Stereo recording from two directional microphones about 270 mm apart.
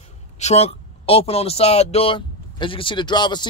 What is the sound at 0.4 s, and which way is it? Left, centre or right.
Speech, left.